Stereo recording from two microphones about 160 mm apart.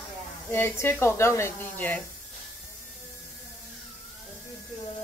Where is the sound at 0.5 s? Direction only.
15° left (ahead or behind).